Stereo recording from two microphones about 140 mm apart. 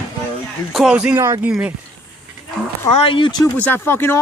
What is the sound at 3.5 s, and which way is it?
Speech, 15° left (ahead or behind).